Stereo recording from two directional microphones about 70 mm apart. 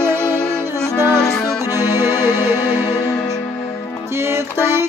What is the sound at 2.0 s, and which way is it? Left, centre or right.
Music, left.